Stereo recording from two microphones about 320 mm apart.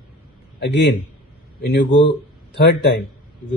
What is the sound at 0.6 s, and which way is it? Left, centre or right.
A man's voice, left.